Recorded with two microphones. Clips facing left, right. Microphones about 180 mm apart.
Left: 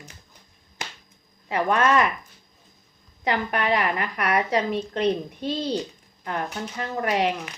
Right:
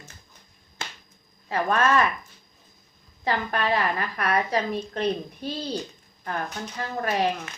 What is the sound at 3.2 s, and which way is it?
A woman's voice, 20° left (ahead or behind).